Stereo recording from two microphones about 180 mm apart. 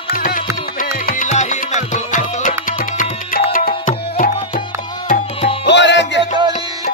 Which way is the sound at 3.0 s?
50° left (ahead or behind).